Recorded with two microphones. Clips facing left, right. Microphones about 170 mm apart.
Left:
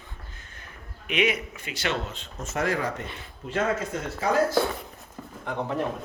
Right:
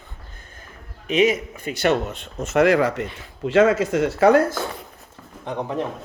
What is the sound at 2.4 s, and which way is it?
Speech, 80° right.